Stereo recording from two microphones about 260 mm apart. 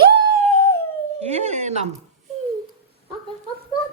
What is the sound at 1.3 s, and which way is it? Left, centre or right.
Speech, right.